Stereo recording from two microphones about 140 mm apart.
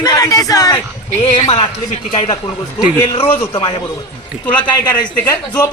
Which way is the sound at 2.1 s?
45° left (ahead or behind).